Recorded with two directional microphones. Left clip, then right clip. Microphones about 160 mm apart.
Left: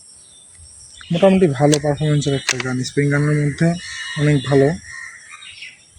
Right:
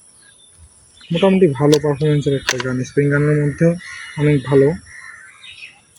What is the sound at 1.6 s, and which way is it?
Speech, 25° left (ahead or behind).